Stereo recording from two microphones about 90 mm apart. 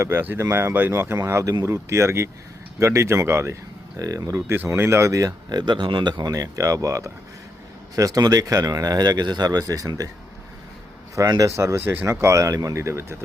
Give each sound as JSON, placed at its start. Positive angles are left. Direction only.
{"t": 0.0, "sound": "speech", "side_deg": -25}
{"t": 4.5, "sound": "speech", "side_deg": -25}
{"t": 6.3, "sound": "speech", "side_deg": -40}
{"t": 11.1, "sound": "speech", "side_deg": -40}